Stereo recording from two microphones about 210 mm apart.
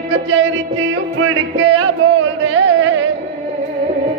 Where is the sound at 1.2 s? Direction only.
70° right (ahead or behind).